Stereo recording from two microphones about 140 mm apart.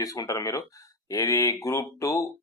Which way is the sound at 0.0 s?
25° left (ahead or behind).